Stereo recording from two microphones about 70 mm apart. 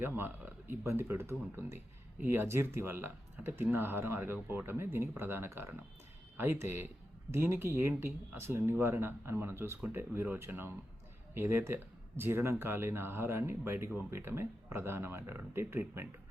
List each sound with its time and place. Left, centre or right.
0.0 s speech: right